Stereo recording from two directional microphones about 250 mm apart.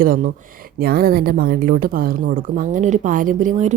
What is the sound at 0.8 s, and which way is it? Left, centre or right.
A woman's voice, right.